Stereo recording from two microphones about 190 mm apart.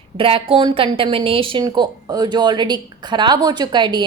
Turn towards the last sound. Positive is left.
turn(degrees=-25)  # may be behind; listen again after turning